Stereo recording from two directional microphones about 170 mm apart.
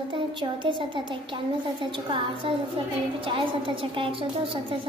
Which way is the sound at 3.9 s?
30° right (ahead or behind).